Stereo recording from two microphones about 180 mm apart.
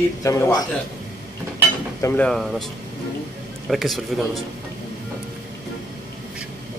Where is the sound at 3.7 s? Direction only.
Centre (ahead or behind).